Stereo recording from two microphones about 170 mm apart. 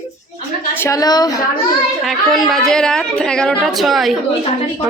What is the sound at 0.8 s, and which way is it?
Speech, 20° left (ahead or behind).